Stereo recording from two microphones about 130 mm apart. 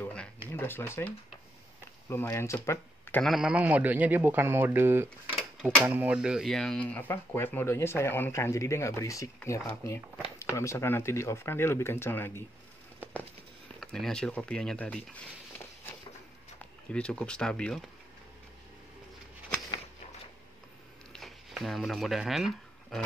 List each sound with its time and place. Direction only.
0.0 s a sound: 10° left (ahead or behind)
0.5 s speech: 15° left (ahead or behind)
3.2 s a man's voice: centre (ahead or behind); by 12.4 s 15° left (ahead or behind)
13.7 s speech: 5° left (ahead or behind)
16.9 s speech: 10° left (ahead or behind)
21.1 s a sound: centre (ahead or behind)